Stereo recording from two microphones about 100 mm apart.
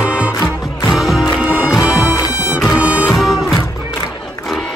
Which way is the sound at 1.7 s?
5° right (ahead or behind).